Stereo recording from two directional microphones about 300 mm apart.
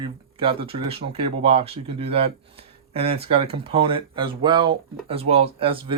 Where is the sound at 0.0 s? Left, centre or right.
Centre.